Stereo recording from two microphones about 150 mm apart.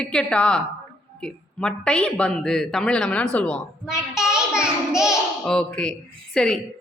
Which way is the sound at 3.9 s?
5° right (ahead or behind).